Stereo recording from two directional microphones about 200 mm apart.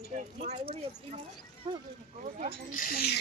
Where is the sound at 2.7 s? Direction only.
45° left (ahead or behind).